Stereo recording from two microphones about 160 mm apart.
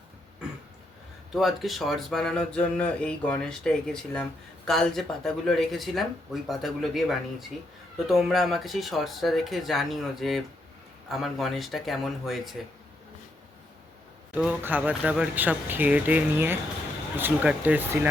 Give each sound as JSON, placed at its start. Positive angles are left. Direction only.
{"t": 1.3, "sound": "speech", "side_deg": 0}
{"t": 14.3, "sound": "speech", "side_deg": -10}